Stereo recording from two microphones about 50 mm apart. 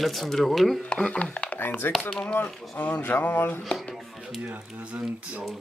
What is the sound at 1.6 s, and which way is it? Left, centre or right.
Speech, left.